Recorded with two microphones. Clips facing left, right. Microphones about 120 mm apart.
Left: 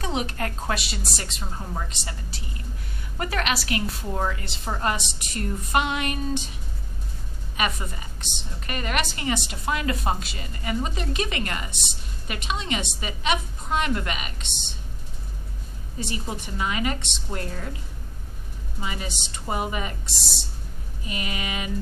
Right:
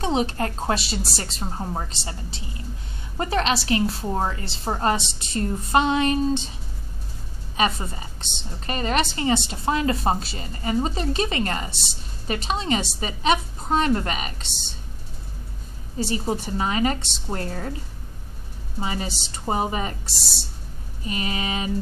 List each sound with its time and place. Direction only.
0.0 s a woman's voice: 30° right (ahead or behind)
7.5 s a woman's voice: 30° right (ahead or behind)
16.0 s a woman's voice: 35° right (ahead or behind)
18.8 s a woman's voice: 35° right (ahead or behind)